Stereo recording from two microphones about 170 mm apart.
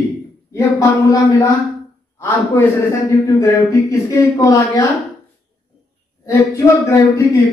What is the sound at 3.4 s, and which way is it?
Speech, 20° left (ahead or behind).